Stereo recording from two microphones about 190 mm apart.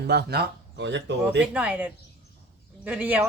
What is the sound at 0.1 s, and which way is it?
Speech, 55° right (ahead or behind).